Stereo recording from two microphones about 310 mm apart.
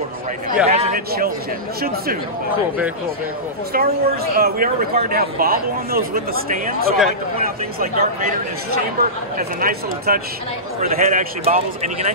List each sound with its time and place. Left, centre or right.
0.7 s a man's voice: right
3.7 s speech: right